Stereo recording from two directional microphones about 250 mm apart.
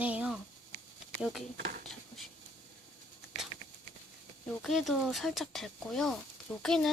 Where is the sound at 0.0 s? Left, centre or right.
Centre.